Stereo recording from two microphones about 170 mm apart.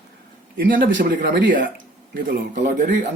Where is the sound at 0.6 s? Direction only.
60° right (ahead or behind).